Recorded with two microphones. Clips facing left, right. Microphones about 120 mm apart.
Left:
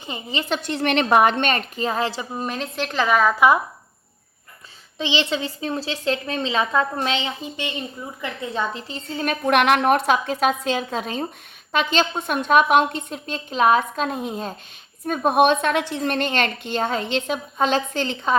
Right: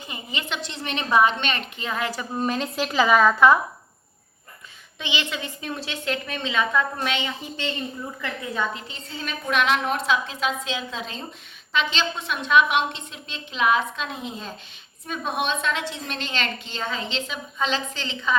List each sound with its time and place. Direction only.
0.1 s a woman's voice: 30° left (ahead or behind)
2.3 s a woman's voice: centre (ahead or behind)
4.9 s a woman's voice: 30° left (ahead or behind); by 7.8 s 15° left (ahead or behind)
8.2 s a woman's voice: 25° left (ahead or behind)
8.9 s a woman's voice: 55° left (ahead or behind)